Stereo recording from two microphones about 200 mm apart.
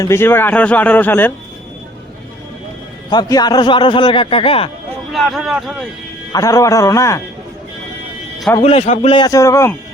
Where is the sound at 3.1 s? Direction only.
20° left (ahead or behind).